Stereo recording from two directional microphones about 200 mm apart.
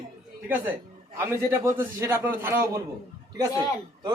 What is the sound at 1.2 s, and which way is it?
A man's voice, 10° right (ahead or behind).